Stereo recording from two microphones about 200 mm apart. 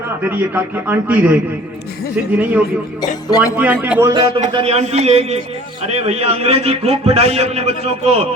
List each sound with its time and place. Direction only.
0.2 s a man's voice: 10° right (ahead or behind)
2.4 s a man's voice: 10° right (ahead or behind)
3.2 s speech: 20° left (ahead or behind)
3.5 s a man's voice: 10° right (ahead or behind)
4.1 s a man's voice: 30° right (ahead or behind)